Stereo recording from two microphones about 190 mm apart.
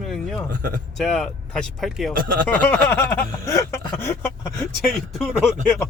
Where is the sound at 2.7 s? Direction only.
10° left (ahead or behind).